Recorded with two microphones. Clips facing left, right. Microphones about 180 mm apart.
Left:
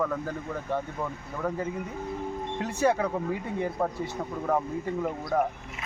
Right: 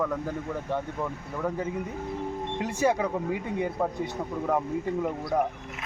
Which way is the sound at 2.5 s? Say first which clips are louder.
Even; 10° right (ahead or behind).